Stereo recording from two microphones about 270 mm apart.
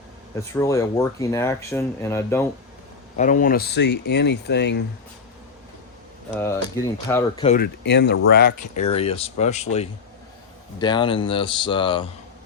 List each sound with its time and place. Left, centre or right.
0.5 s speech: centre
3.2 s speech: left
6.3 s speech: centre
7.4 s speech: left
8.8 s speech: left